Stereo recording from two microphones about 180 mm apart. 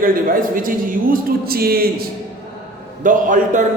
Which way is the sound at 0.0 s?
50° right (ahead or behind).